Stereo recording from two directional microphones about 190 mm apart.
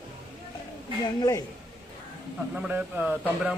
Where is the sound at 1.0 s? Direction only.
20° left (ahead or behind).